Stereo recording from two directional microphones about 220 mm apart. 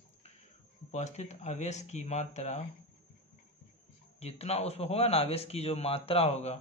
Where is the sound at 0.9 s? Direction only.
30° left (ahead or behind).